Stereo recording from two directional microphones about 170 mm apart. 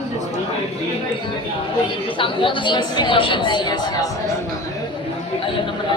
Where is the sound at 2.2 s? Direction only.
30° left (ahead or behind).